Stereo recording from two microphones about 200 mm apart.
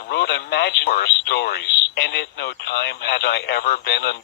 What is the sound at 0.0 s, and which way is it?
Speech, 55° left (ahead or behind).